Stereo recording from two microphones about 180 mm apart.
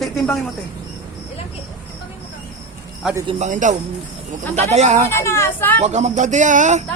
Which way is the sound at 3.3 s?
40° right (ahead or behind).